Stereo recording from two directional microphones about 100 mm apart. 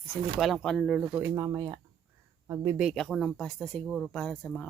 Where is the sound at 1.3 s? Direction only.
35° right (ahead or behind).